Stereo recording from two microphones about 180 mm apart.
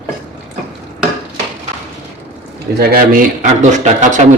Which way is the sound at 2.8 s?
55° right (ahead or behind).